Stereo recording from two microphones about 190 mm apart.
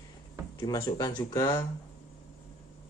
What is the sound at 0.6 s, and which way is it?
Speech, 20° left (ahead or behind).